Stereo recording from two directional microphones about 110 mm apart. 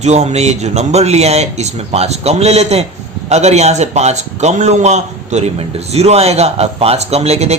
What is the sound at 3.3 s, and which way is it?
A man's voice, 90° right.